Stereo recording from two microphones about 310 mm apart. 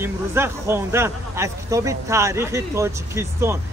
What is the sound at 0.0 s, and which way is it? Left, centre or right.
Speech, centre.